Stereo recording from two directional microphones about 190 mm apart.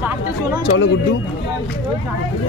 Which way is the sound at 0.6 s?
65° left (ahead or behind).